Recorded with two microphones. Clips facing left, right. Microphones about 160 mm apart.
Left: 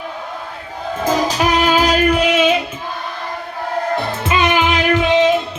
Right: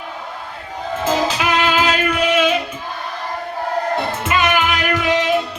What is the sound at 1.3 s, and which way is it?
Music, 40° left (ahead or behind).